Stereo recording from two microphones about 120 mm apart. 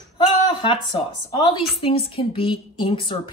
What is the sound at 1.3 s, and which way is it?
A woman's voice, 40° left (ahead or behind).